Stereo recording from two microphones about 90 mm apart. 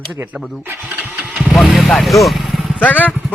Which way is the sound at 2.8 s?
15° left (ahead or behind).